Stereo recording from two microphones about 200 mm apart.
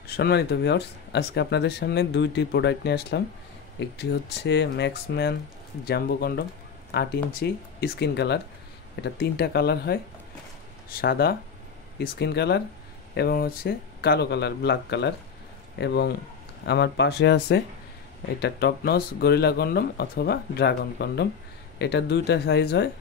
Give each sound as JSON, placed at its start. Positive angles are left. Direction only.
{"t": 0.0, "sound": "speech", "side_deg": 50}
{"t": 11.0, "sound": "speech", "side_deg": 50}